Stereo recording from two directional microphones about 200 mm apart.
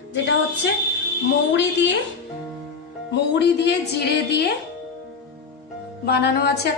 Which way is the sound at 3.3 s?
60° left (ahead or behind).